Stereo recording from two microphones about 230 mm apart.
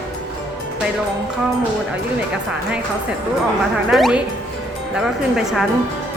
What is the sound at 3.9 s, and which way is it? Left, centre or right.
Music, centre.